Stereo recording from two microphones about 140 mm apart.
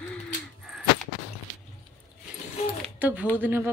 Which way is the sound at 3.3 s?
15° right (ahead or behind).